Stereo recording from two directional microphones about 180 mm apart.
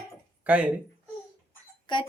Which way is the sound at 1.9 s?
25° left (ahead or behind).